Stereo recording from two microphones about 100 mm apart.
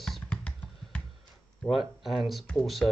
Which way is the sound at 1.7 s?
5° right (ahead or behind).